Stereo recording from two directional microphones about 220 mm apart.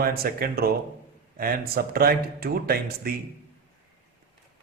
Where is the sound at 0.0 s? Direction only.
45° right (ahead or behind).